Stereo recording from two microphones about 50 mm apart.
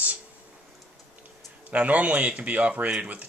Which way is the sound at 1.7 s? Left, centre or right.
Right.